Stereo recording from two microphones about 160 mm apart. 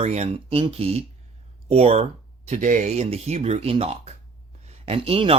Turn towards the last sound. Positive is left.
turn(degrees=-35)  # may be behind; listen again after turning